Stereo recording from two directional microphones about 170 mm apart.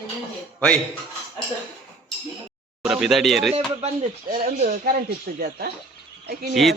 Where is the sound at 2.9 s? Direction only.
Centre (ahead or behind).